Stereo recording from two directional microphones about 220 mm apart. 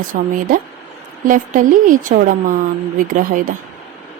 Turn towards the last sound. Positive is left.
turn(degrees=-40)  # may be behind; listen again after turning